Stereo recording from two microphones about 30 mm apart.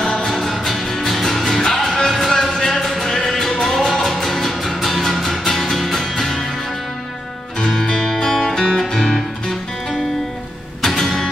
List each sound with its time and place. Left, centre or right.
0.2 s music: centre
1.0 s music: centre; by 2.2 s left
2.2 s music: centre
5.4 s music: centre
5.8 s music: centre
8.3 s music: centre